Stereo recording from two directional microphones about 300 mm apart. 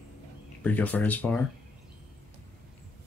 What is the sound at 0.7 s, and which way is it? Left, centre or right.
Speech, centre.